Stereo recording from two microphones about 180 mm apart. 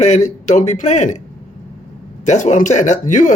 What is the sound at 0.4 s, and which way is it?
Speech, 40° left (ahead or behind).